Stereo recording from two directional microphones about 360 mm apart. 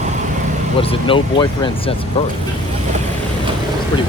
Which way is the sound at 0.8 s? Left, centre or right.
Centre.